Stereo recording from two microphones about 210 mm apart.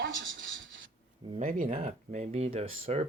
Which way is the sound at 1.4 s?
35° right (ahead or behind).